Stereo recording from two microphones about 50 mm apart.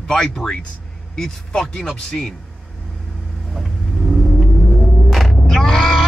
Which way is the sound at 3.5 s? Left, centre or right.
Centre.